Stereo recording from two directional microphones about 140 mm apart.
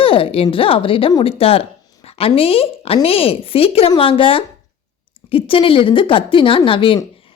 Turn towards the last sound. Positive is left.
turn(degrees=40)  # may be behind; listen again after turning